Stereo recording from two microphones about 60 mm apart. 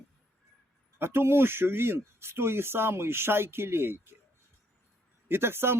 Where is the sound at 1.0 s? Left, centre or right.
Right.